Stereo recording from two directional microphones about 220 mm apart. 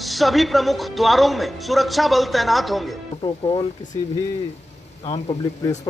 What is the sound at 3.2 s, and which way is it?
Speech, 25° left (ahead or behind).